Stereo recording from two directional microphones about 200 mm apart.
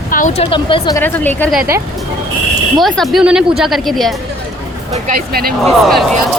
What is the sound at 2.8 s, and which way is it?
Speech, centre (ahead or behind).